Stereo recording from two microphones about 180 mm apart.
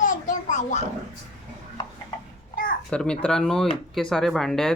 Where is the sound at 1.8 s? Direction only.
20° left (ahead or behind).